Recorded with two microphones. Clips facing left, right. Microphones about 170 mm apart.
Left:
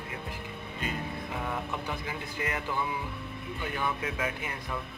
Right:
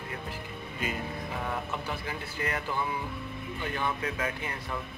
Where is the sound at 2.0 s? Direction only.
15° left (ahead or behind).